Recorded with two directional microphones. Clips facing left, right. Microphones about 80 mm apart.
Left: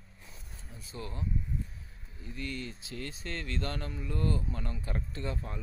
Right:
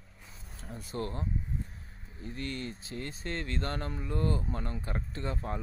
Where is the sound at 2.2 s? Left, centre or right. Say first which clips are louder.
Right 2 dB; right.